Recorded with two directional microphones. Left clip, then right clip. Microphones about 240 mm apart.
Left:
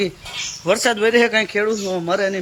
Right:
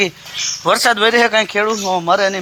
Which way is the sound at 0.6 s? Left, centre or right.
Right.